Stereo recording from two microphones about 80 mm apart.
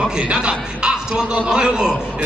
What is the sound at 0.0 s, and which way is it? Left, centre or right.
A man's voice, centre.